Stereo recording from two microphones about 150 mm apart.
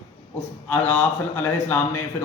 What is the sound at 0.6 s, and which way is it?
A man's voice, 15° left (ahead or behind).